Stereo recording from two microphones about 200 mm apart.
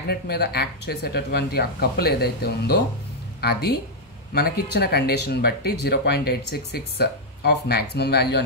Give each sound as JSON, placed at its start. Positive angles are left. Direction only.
{"t": 0.1, "sound": "speech", "side_deg": 50}